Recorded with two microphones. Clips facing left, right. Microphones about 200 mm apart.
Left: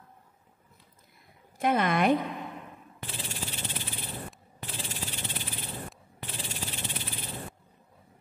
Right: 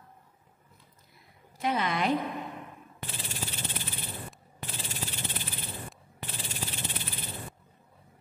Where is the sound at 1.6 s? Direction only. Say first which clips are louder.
Left 4 dB; 50° left (ahead or behind).